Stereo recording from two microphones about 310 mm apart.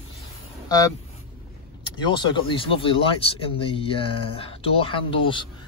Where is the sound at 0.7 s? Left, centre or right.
Centre.